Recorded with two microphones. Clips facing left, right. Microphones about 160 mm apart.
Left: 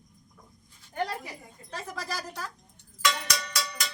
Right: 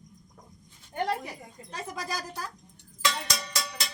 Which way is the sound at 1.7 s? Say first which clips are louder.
Right 1 dB; 15° right (ahead or behind).